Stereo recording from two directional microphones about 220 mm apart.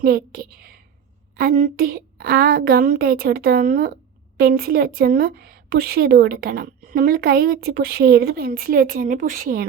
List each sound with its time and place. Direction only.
0.0 s a woman's voice: 45° right (ahead or behind)